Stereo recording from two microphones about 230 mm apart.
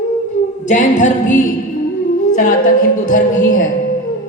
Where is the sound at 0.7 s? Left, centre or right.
Left.